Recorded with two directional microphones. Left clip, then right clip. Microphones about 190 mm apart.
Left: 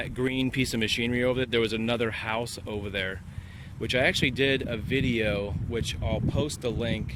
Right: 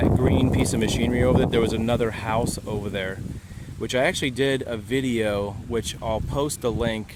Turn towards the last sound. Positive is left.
turn(degrees=-30)  # may be behind; listen again after turning